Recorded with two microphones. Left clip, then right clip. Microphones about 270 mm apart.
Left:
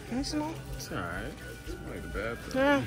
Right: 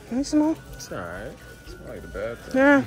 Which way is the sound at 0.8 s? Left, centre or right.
Right.